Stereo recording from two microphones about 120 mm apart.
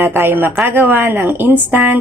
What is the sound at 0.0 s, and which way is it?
Speech, 15° right (ahead or behind).